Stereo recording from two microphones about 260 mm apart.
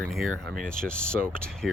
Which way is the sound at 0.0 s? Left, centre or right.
Centre.